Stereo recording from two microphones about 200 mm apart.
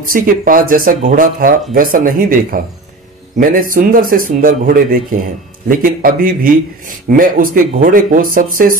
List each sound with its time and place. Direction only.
0.1 s speech: 45° right (ahead or behind)